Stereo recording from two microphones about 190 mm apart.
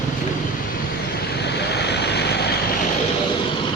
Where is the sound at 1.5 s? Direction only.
60° left (ahead or behind).